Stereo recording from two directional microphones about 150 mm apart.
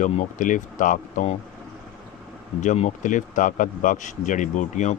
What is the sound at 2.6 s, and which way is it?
Speech, 50° left (ahead or behind).